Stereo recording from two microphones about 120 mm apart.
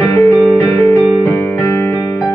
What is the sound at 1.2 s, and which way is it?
Music, 20° left (ahead or behind).